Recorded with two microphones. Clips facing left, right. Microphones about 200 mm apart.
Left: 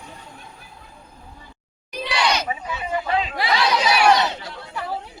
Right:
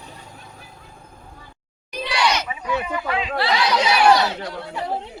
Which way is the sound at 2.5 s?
35° left (ahead or behind).